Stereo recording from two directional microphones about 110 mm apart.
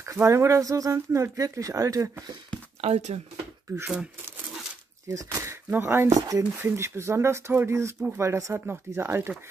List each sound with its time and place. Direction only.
0.0 s speech: 25° right (ahead or behind)
2.8 s speech: 80° right
3.8 s speech: 10° right (ahead or behind)
5.0 s speech: 30° right (ahead or behind)
6.1 s speech: 35° right (ahead or behind)
6.6 s speech: 25° right (ahead or behind)